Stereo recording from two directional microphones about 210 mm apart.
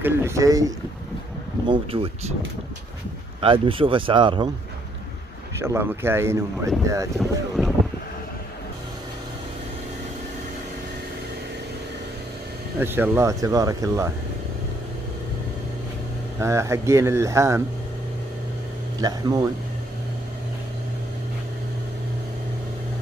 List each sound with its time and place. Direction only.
0.0 s speech: 10° right (ahead or behind)
1.7 s speech: 25° right (ahead or behind)
3.3 s speech: 25° right (ahead or behind)
5.6 s speech: 10° right (ahead or behind)
7.2 s speech: centre (ahead or behind)
12.7 s speech: 10° right (ahead or behind)
16.3 s speech: 15° right (ahead or behind)
18.9 s speech: 20° right (ahead or behind)